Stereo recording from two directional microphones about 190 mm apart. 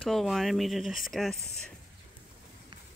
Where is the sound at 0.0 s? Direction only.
Centre (ahead or behind).